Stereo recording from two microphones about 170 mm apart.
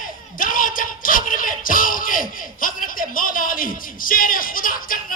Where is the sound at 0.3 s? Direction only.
55° left (ahead or behind).